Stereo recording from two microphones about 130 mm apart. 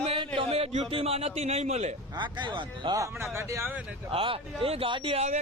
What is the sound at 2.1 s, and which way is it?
Speech, 35° right (ahead or behind).